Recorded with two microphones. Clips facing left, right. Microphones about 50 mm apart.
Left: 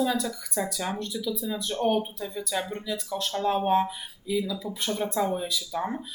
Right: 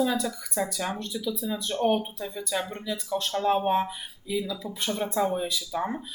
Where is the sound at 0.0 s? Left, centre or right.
Centre.